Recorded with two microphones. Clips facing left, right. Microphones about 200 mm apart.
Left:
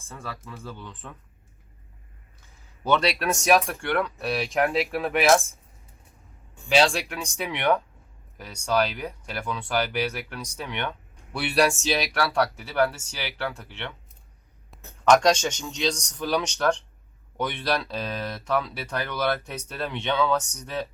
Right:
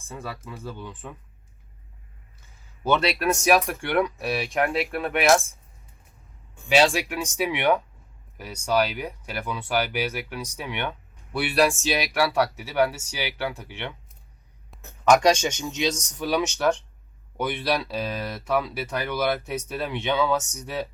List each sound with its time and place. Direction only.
0.1 s speech: 10° right (ahead or behind)
2.8 s speech: 5° right (ahead or behind)
6.7 s speech: 5° right (ahead or behind)